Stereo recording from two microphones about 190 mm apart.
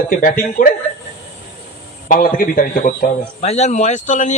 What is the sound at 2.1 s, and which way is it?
A man's voice, 50° left (ahead or behind).